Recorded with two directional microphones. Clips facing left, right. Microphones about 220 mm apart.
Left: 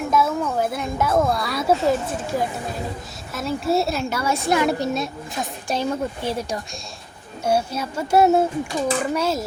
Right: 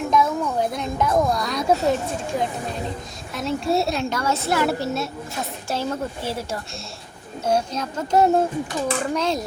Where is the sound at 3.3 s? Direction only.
Centre (ahead or behind).